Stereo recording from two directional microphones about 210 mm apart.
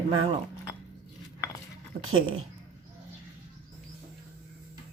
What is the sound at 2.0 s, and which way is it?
Speech, 75° right (ahead or behind).